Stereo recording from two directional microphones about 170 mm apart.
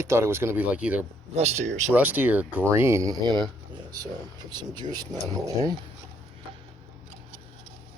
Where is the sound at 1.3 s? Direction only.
40° right (ahead or behind).